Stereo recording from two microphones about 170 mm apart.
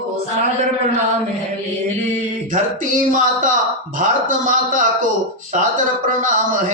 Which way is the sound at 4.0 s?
50° right (ahead or behind).